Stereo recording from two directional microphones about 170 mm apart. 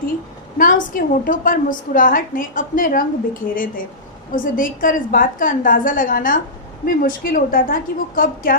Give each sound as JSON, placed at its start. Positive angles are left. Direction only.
{"t": 0.6, "sound": "a woman's voice", "side_deg": 50}